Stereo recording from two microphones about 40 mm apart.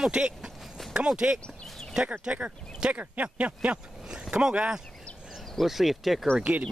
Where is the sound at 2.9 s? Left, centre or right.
Right.